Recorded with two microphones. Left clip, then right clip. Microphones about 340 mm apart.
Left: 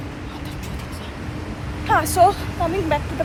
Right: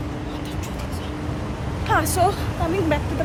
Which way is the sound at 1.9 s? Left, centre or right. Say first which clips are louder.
Left 4 dB; centre.